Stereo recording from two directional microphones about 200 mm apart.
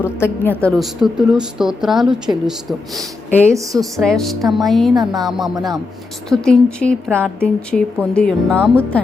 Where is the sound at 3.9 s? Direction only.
Centre (ahead or behind).